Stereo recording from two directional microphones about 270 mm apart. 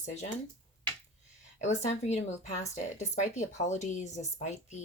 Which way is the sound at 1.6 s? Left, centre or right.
Left.